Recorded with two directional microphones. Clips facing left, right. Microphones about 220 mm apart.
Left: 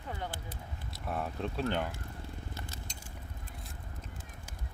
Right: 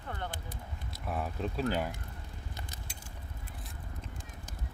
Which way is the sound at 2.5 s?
15° right (ahead or behind).